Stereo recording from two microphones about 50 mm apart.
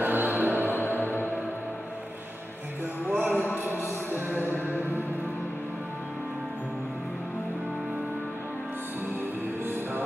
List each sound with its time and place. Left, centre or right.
0.0 s music: right
3.1 s a sound: right
4.7 s music: left